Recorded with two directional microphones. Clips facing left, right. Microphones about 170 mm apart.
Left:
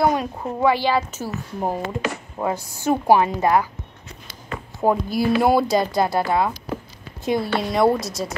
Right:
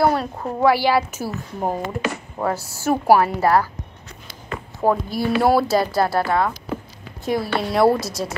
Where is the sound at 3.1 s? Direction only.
20° left (ahead or behind).